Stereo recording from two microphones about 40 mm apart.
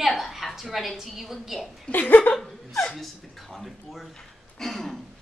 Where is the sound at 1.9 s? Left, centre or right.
Left.